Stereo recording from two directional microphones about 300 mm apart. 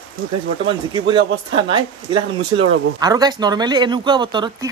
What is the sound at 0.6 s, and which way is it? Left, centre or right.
Speech, centre.